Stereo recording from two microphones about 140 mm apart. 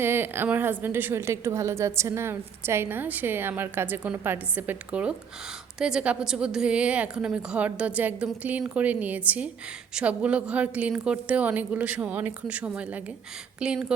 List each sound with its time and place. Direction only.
0.0 s a woman's voice: 15° right (ahead or behind)